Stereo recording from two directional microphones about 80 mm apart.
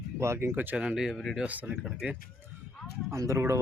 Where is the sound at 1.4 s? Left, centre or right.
Centre.